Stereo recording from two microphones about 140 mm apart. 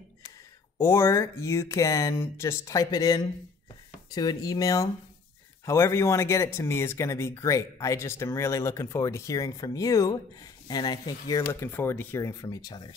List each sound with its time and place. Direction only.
0.7 s speech: 20° left (ahead or behind)